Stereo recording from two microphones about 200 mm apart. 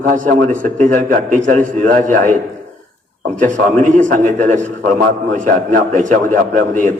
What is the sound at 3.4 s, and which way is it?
A man's voice, 40° right (ahead or behind).